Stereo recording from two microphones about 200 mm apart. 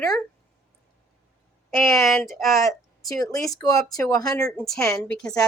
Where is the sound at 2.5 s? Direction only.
15° left (ahead or behind).